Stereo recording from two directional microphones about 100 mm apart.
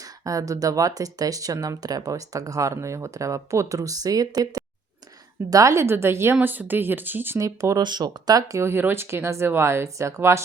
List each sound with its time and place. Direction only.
0.0 s speech: 35° right (ahead or behind); by 7.4 s 20° right (ahead or behind)
7.4 s speech: 35° right (ahead or behind)
7.8 s speech: 45° right (ahead or behind); by 10.4 s 30° right (ahead or behind)